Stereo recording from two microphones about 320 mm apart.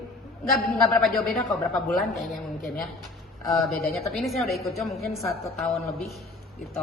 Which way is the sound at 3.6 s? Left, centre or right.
Centre.